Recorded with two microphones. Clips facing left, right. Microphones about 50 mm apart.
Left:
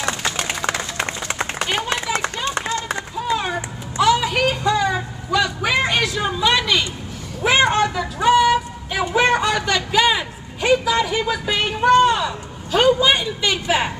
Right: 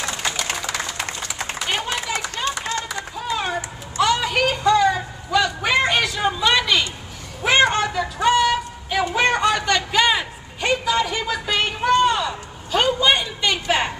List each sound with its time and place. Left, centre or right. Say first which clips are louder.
0.7 s applause: left 3 dB; left
2.4 s clapping: even; centre
3.2 s a sound: left 2 dB; centre